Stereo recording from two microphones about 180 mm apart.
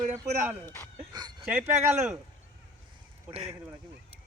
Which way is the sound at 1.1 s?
25° right (ahead or behind).